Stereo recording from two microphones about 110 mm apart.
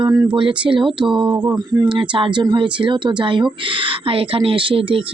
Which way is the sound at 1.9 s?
50° right (ahead or behind).